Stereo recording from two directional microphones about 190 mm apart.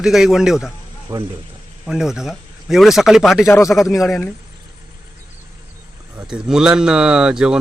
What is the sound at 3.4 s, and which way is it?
Speech, 10° left (ahead or behind).